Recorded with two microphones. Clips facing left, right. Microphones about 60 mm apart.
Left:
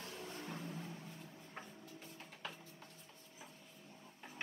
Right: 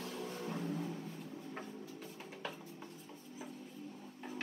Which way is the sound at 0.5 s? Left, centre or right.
Right.